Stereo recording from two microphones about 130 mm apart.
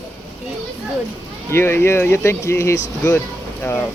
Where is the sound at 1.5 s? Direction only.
20° left (ahead or behind).